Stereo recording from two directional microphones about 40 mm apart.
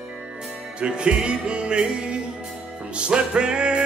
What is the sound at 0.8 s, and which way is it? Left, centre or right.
Music, right.